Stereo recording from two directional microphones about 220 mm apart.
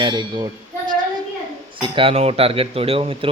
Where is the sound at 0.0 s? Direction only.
20° right (ahead or behind).